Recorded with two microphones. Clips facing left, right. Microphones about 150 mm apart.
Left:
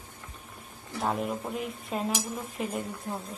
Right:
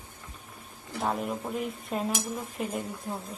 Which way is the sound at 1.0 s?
Centre (ahead or behind).